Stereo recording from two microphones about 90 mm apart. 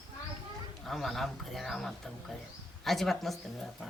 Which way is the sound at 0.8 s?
5° left (ahead or behind).